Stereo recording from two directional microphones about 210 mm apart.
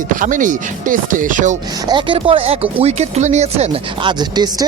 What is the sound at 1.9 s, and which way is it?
Speech, 25° right (ahead or behind).